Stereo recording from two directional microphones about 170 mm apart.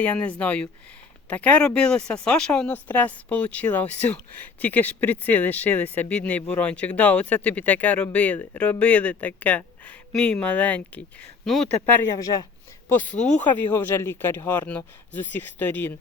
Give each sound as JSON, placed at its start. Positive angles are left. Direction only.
{"t": 0.0, "sound": "speech", "side_deg": 10}
{"t": 11.9, "sound": "speech", "side_deg": 20}
{"t": 12.9, "sound": "speech", "side_deg": 10}